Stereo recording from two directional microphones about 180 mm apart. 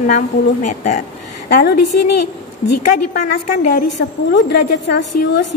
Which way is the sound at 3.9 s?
70° left (ahead or behind).